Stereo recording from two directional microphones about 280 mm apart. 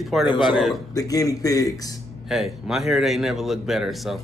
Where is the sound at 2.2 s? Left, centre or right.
Centre.